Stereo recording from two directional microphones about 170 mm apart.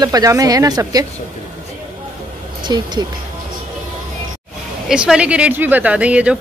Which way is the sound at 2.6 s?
25° right (ahead or behind).